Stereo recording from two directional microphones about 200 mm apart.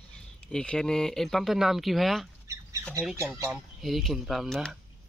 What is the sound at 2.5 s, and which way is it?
Squawk, 15° right (ahead or behind).